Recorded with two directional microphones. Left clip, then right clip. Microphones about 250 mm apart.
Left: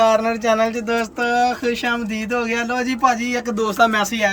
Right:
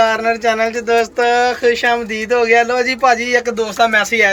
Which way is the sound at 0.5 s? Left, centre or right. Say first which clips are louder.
Right 2 dB; left.